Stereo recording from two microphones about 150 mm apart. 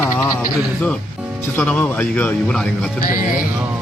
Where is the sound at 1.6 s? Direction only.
10° left (ahead or behind).